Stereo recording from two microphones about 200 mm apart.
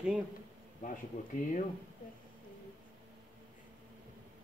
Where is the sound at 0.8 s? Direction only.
40° left (ahead or behind).